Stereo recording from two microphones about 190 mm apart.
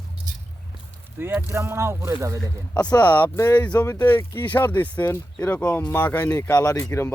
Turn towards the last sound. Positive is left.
turn(degrees=15)  # may be behind; listen again after turning